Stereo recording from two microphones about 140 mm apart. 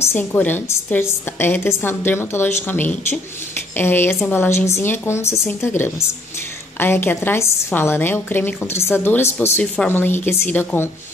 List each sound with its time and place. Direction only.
0.0 s a woman's voice: 15° left (ahead or behind)
3.7 s a woman's voice: 15° left (ahead or behind)
6.8 s a woman's voice: 15° left (ahead or behind)